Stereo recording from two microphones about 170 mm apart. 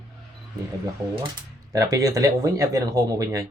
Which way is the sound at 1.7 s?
20° right (ahead or behind).